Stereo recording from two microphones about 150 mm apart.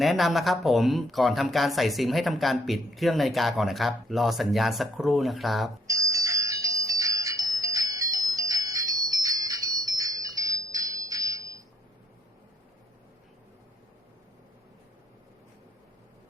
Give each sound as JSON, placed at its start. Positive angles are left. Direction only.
{"t": 0.0, "sound": "speech", "side_deg": 0}
{"t": 5.9, "sound": "music", "side_deg": -20}